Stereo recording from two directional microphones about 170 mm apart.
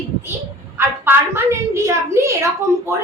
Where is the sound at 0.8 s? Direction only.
15° right (ahead or behind).